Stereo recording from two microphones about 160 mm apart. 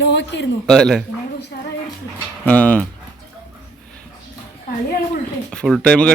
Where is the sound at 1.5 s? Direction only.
70° left (ahead or behind).